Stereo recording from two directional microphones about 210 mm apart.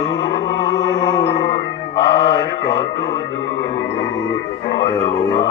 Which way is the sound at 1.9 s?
55° left (ahead or behind).